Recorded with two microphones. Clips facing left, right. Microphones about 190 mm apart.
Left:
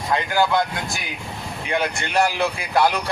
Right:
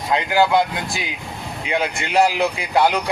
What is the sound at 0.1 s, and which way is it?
Speech, 20° right (ahead or behind).